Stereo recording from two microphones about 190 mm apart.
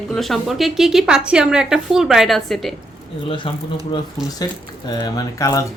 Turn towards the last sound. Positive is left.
turn(degrees=20)  # may be behind; listen again after turning